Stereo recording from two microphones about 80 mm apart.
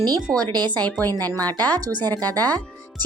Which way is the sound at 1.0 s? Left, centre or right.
Right.